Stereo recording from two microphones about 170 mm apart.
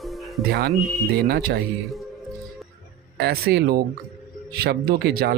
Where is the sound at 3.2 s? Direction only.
70° right (ahead or behind).